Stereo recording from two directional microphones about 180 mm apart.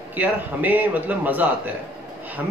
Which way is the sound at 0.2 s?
10° right (ahead or behind).